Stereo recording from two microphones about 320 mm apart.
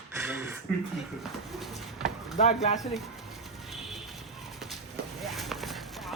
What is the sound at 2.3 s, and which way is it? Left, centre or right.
Speech, left.